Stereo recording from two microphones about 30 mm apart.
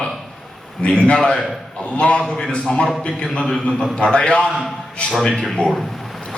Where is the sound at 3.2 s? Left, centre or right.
Left.